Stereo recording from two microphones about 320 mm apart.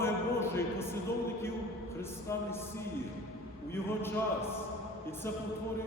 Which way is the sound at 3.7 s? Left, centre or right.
Centre.